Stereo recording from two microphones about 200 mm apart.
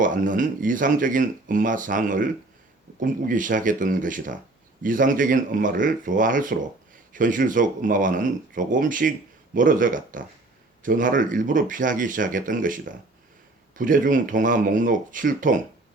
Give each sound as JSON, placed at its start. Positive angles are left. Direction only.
{"t": 0.0, "sound": "speech", "side_deg": -40}